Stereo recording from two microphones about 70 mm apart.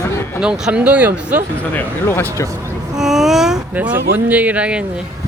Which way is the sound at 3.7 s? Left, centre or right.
Right.